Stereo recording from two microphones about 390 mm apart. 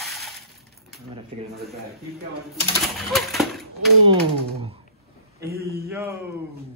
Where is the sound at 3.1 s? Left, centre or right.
Centre.